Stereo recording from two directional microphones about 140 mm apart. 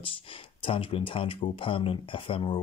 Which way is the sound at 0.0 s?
40° left (ahead or behind).